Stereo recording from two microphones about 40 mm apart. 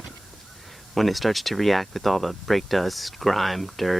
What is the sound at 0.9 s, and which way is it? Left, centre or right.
Speech, centre.